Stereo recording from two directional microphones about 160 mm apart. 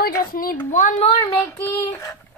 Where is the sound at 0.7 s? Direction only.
55° left (ahead or behind).